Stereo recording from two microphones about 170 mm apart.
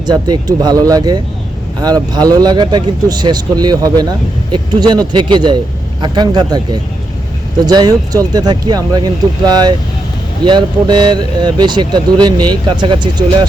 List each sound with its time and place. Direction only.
0.0 s speech: 25° right (ahead or behind)